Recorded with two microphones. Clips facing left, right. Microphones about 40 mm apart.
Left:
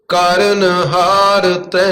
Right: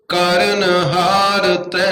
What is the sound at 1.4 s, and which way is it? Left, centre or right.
Mantra, right.